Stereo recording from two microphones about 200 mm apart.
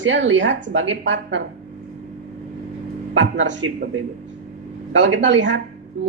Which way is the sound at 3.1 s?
65° right (ahead or behind).